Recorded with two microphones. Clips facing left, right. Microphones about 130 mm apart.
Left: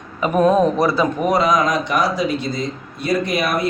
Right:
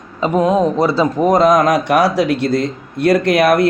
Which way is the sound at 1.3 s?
50° right (ahead or behind).